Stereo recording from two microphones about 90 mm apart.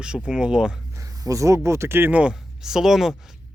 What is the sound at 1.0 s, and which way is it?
Speech, 40° right (ahead or behind).